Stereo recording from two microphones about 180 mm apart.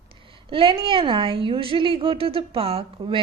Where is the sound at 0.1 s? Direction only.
30° right (ahead or behind).